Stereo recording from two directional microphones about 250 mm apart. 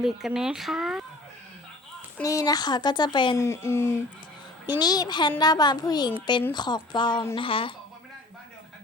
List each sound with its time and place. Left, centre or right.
0.0 s speech: centre
2.1 s speech: centre